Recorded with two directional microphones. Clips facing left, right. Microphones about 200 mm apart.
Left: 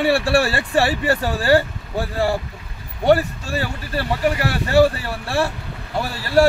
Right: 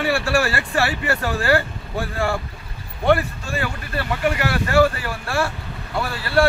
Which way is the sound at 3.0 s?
35° left (ahead or behind).